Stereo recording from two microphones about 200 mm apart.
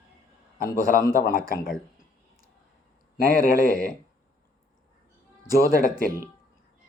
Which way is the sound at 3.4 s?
45° left (ahead or behind).